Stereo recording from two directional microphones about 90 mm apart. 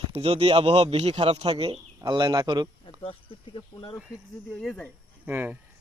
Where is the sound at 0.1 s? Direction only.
90° right.